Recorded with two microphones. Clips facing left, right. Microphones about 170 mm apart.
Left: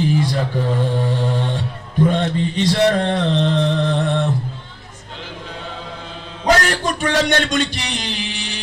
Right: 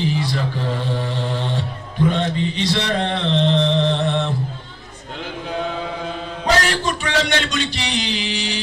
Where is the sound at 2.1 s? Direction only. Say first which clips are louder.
Left 2 dB; 45° left (ahead or behind).